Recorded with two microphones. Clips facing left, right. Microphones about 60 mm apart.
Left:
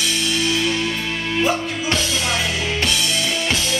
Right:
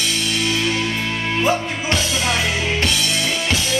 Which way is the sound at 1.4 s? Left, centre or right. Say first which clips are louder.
Right 1 dB; right.